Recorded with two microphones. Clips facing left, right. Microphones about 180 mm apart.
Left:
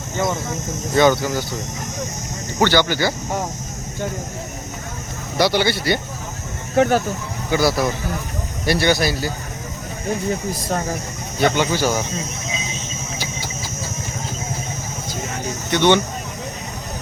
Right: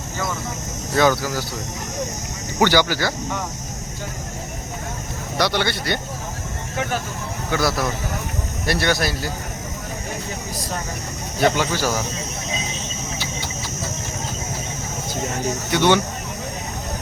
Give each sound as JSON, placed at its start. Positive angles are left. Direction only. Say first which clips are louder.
{"t": 0.9, "sound": "speech", "louder": "left 3 dB", "side_deg": 0}
{"t": 2.6, "sound": "speech", "louder": "left 1 dB", "side_deg": -10}
{"t": 5.4, "sound": "speech", "louder": "left 4 dB", "side_deg": 5}
{"t": 6.7, "sound": "speech", "louder": "left 10 dB", "side_deg": 45}
{"t": 7.5, "sound": "speech", "louder": "left 4 dB", "side_deg": 0}
{"t": 11.3, "sound": "speech", "louder": "left 1 dB", "side_deg": 0}
{"t": 15.7, "sound": "speech", "louder": "left 2 dB", "side_deg": -5}